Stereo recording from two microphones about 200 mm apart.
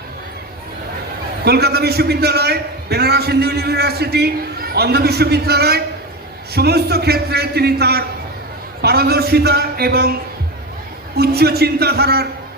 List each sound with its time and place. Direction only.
1.5 s a man's voice: 55° right (ahead or behind)
11.2 s a man's voice: 50° right (ahead or behind)